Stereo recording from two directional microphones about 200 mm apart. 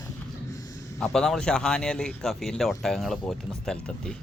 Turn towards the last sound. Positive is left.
turn(degrees=5)  # may be behind; listen again after turning